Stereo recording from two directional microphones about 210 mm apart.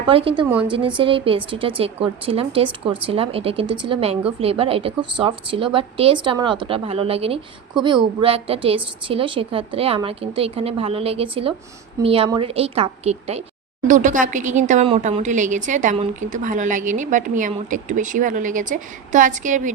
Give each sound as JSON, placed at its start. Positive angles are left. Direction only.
{"t": 0.1, "sound": "a woman's voice", "side_deg": -25}